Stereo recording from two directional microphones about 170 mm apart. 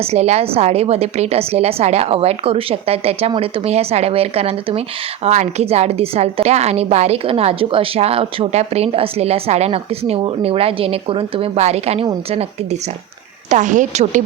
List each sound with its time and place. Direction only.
0.0 s a woman's voice: 40° right (ahead or behind)
13.5 s a woman's voice: 45° right (ahead or behind)